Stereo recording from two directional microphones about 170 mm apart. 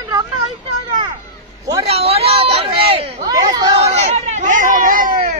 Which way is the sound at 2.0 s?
35° right (ahead or behind).